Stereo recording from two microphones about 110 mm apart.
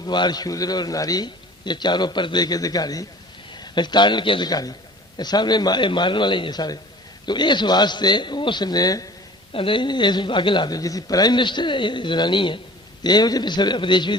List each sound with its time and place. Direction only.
0.0 s a man's voice: 40° left (ahead or behind)
9.5 s a man's voice: 50° left (ahead or behind)